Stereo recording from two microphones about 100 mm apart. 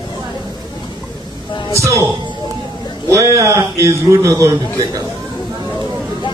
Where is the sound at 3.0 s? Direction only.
30° right (ahead or behind).